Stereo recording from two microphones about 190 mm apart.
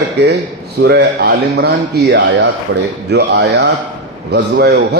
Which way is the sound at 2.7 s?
65° right (ahead or behind).